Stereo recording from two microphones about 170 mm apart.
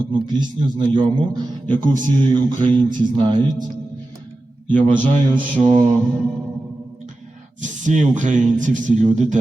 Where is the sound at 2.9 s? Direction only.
25° right (ahead or behind).